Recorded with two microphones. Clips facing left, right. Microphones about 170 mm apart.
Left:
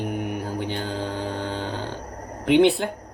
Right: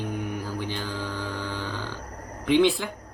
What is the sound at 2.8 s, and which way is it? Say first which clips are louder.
Speech: left 6 dB; 50° left (ahead or behind).